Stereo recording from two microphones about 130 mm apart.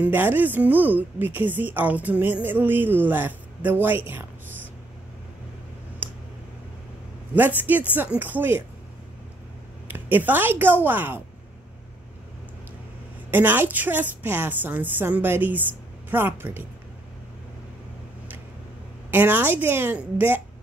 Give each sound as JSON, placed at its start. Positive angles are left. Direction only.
{"t": 0.0, "sound": "a woman's voice", "side_deg": -15}
{"t": 6.0, "sound": "a sound", "side_deg": -15}
{"t": 7.3, "sound": "a woman's voice", "side_deg": -15}
{"t": 9.9, "sound": "a woman's voice", "side_deg": -15}
{"t": 13.3, "sound": "a woman's voice", "side_deg": -15}
{"t": 19.0, "sound": "a woman's voice", "side_deg": -15}